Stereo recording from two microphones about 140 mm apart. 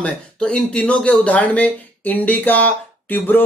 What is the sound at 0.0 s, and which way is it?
Speech, 5° left (ahead or behind).